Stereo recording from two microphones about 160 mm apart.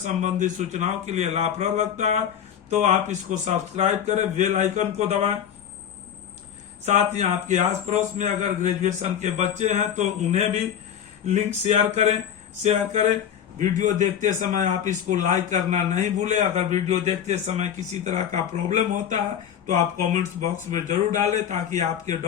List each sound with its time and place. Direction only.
0.0 s a man's voice: 50° right (ahead or behind)
6.8 s a man's voice: 45° right (ahead or behind)